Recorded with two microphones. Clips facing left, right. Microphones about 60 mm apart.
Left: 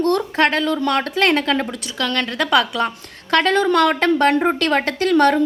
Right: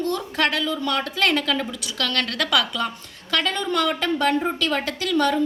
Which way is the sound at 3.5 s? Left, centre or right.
Left.